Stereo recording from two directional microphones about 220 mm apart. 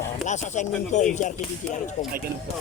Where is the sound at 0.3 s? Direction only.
35° left (ahead or behind).